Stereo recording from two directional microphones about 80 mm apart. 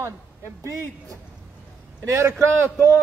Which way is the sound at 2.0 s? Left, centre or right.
Right.